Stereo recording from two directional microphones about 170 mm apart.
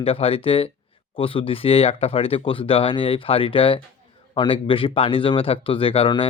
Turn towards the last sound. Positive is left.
turn(degrees=35)  # may be behind; listen again after turning